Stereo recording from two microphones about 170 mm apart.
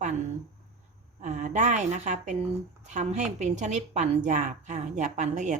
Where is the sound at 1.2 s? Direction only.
45° right (ahead or behind).